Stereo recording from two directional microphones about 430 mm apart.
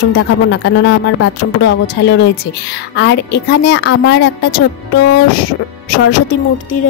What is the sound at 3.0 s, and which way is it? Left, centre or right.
A woman's voice, left.